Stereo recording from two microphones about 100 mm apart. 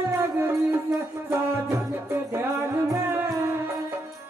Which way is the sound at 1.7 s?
25° right (ahead or behind).